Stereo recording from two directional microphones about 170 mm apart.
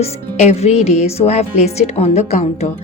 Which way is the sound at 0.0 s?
40° left (ahead or behind).